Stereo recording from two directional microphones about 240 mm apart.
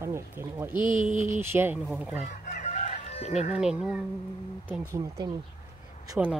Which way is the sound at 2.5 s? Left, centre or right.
Left.